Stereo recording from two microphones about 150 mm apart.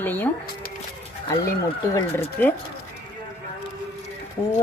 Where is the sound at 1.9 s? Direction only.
15° left (ahead or behind).